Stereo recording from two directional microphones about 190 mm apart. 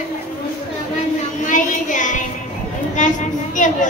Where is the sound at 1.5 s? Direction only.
40° left (ahead or behind).